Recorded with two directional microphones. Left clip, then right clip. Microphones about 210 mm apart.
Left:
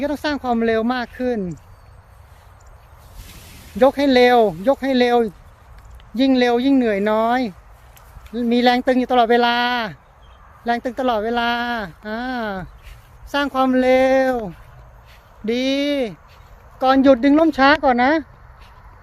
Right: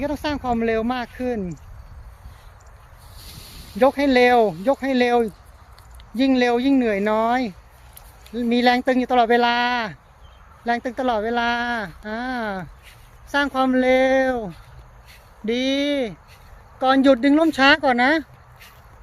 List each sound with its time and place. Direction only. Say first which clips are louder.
0.0 s speech: left 3 dB; 20° left (ahead or behind)
3.8 s speech: left 2 dB; 15° left (ahead or behind)